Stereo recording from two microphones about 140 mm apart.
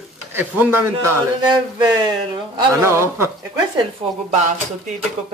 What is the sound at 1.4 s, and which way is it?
Speech, 30° right (ahead or behind).